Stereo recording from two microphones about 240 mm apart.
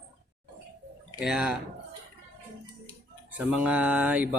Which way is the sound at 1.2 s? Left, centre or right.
Centre.